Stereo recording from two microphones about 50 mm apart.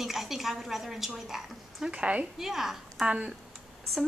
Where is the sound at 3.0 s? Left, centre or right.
Right.